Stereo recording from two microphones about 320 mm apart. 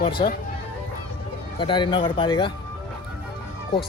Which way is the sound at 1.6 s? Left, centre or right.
Centre.